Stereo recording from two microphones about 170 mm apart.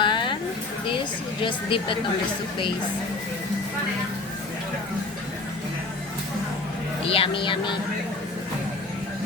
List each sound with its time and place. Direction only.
0.0 s a sound: 30° left (ahead or behind)
1.4 s speech: 30° left (ahead or behind)
7.0 s speech: 35° left (ahead or behind)